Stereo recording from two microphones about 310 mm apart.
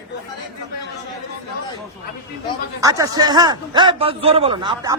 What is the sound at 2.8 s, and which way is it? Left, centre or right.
A man's voice, centre.